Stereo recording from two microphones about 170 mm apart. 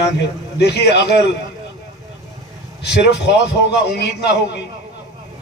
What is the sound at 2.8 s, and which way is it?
A man's voice, 80° left.